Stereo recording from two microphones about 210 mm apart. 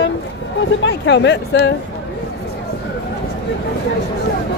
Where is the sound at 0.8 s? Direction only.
55° left (ahead or behind).